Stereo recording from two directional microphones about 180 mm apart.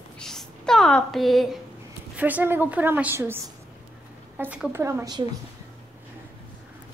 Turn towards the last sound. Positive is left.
turn(degrees=-20)  # may be behind; listen again after turning